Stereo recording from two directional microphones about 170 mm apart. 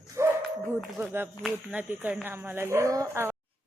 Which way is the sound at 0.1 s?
15° right (ahead or behind).